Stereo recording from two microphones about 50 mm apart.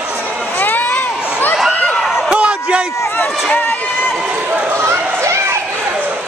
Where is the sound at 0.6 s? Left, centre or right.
Left.